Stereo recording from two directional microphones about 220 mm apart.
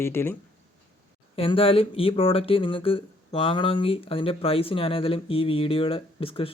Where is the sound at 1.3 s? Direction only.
25° left (ahead or behind).